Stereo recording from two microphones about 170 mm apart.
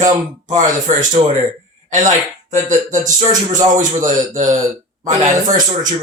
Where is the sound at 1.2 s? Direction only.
40° right (ahead or behind).